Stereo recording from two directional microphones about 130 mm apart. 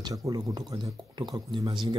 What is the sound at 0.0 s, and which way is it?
Speech, 30° right (ahead or behind).